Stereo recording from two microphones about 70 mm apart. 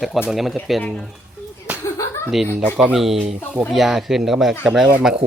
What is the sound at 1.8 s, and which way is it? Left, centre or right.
Slap, left.